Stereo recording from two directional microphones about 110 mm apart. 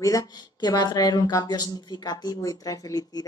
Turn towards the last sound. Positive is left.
turn(degrees=35)  # may be behind; listen again after turning